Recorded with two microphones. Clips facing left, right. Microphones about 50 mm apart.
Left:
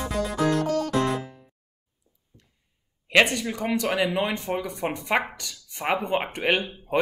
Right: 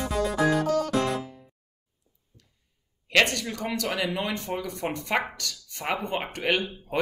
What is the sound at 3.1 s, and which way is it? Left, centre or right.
Speech, centre.